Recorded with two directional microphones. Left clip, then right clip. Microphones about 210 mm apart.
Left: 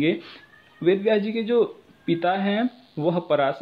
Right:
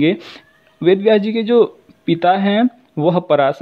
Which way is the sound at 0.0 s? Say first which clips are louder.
Right 7 dB; 45° right (ahead or behind).